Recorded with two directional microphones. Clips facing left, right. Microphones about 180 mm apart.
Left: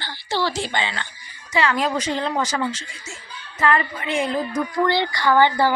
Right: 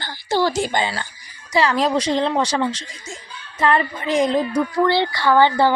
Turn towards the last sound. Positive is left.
turn(degrees=15)  # may be behind; listen again after turning